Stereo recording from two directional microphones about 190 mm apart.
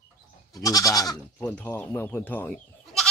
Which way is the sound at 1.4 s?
5° left (ahead or behind).